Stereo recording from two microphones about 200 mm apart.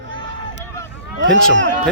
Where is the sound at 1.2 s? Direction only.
65° right (ahead or behind).